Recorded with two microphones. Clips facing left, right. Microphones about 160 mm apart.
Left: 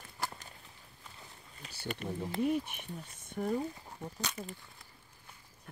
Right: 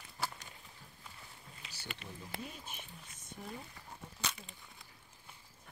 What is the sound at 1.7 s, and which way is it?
Speech, 50° left (ahead or behind).